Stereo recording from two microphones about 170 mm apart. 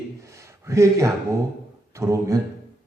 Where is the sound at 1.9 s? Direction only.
15° right (ahead or behind).